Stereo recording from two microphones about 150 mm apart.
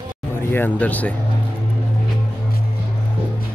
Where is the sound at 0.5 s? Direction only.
10° left (ahead or behind).